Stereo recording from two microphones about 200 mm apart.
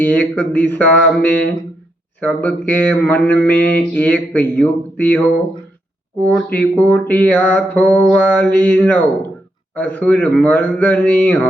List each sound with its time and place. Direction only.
0.0 s mantra: 5° left (ahead or behind)